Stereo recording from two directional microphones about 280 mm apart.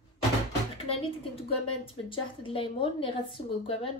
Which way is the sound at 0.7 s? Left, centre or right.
Left.